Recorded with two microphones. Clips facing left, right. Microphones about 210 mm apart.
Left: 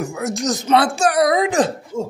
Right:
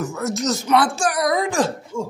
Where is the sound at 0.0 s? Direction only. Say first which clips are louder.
Left 1 dB; 15° left (ahead or behind).